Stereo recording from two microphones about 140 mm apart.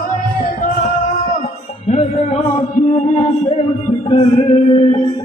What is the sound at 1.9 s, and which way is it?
Music, 55° left (ahead or behind).